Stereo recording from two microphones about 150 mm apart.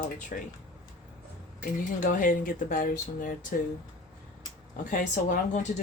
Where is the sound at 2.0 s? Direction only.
60° left (ahead or behind).